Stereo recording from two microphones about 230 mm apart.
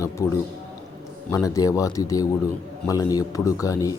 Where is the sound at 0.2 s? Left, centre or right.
Centre.